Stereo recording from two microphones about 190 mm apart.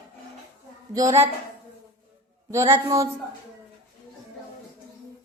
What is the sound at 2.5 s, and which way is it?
Speech, 15° right (ahead or behind).